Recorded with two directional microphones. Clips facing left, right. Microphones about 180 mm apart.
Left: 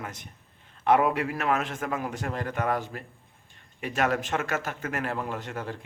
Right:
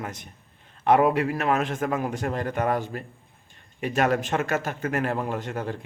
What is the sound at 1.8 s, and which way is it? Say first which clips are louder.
A man's voice: right 5 dB; 45° right (ahead or behind).